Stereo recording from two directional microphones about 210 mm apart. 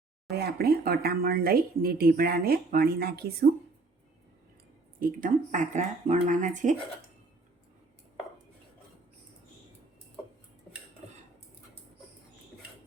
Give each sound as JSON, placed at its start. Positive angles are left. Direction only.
{"t": 0.3, "sound": "speech", "side_deg": -50}
{"t": 4.9, "sound": "speech", "side_deg": -40}
{"t": 10.7, "sound": "cutlery", "side_deg": 5}